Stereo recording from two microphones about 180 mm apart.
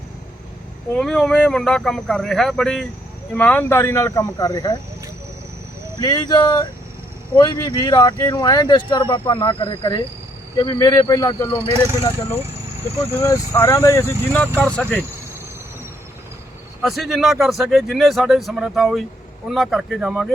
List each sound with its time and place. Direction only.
0.9 s speech: 5° left (ahead or behind); by 4.8 s 20° left (ahead or behind)
6.0 s speech: 20° left (ahead or behind)
12.8 s speech: 10° left (ahead or behind)
16.8 s speech: centre (ahead or behind)